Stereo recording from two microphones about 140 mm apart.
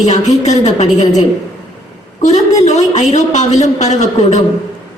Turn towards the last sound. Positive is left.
turn(degrees=55)  # may be behind; listen again after turning